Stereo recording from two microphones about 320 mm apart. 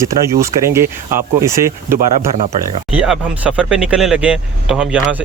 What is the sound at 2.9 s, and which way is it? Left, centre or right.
Speech, centre.